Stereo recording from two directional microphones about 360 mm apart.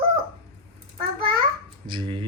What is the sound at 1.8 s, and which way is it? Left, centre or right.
Speech, centre.